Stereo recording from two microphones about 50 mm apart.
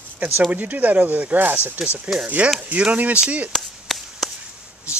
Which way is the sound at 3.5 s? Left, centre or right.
Centre.